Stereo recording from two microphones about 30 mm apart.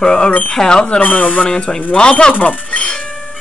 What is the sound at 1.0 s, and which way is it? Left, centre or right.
Speech, left.